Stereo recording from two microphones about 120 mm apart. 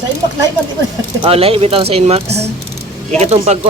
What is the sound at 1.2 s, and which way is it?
Speech, 55° right (ahead or behind).